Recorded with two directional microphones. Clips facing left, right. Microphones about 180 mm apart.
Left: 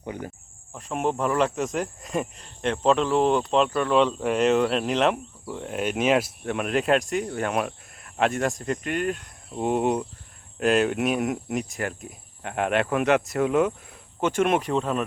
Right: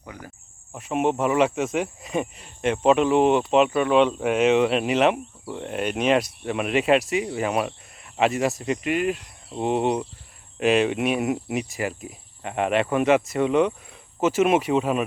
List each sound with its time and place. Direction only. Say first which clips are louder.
0.0 s speech: left 7 dB; 25° left (ahead or behind)
0.8 s speech: right 3 dB; 5° right (ahead or behind)